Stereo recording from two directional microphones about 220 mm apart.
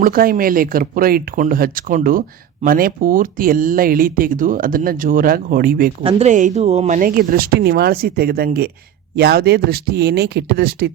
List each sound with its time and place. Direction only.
0.0 s speech: 40° right (ahead or behind)
6.0 s speech: 25° right (ahead or behind); by 10.9 s 45° right (ahead or behind)